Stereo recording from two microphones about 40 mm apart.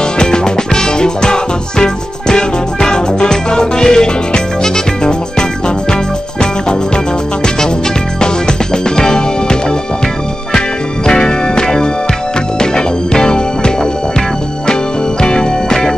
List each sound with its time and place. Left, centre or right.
0.2 s music: centre
8.2 s music: centre
11.1 s music: centre
15.2 s music: centre